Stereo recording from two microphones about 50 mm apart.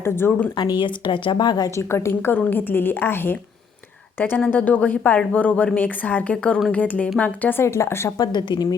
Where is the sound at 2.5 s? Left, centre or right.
Left.